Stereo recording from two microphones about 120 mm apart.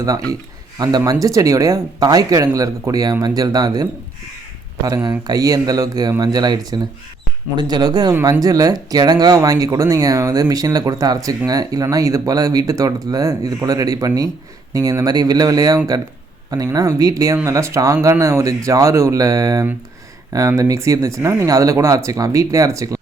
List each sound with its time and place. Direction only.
0.0 s speech: 30° right (ahead or behind)
5.0 s speech: 30° right (ahead or behind)